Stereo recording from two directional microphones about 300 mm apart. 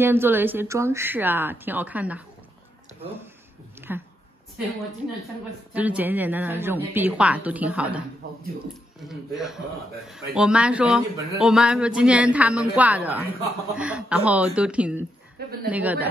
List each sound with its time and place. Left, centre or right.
0.0 s speech: centre
3.9 s speech: centre
5.7 s speech: centre
8.2 s speech: right
9.1 s speech: centre
15.4 s a sound: right
15.7 s speech: centre